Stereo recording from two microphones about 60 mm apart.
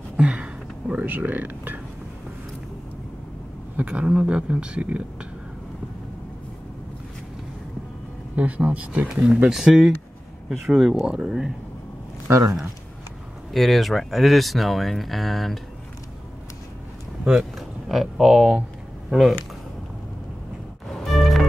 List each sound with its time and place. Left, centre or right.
0.2 s speech: centre
3.7 s speech: centre
8.4 s speech: right
9.5 s speech: centre
12.3 s speech: right
13.5 s speech: centre
17.2 s speech: centre
21.0 s music: centre